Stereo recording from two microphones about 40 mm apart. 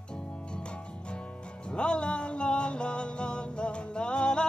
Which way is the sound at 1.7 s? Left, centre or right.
Left.